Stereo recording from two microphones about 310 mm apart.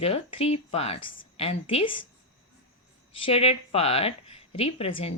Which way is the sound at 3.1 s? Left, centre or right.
Centre.